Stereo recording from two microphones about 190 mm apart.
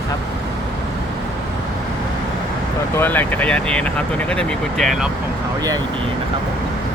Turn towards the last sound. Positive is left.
turn(degrees=0)  # may be behind; listen again after turning